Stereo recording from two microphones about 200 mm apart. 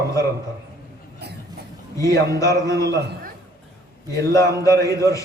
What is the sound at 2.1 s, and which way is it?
Speech, 15° left (ahead or behind).